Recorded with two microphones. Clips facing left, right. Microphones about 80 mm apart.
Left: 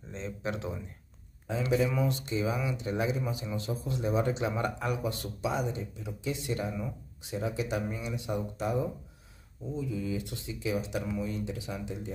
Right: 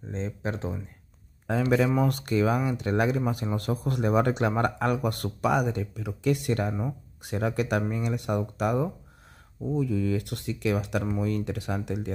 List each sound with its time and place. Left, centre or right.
0.1 s speech: right
1.5 s speech: right